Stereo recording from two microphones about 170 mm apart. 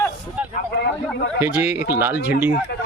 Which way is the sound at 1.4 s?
10° right (ahead or behind).